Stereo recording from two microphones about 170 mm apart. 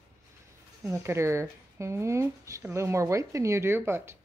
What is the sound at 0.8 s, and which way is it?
Speech, 15° right (ahead or behind).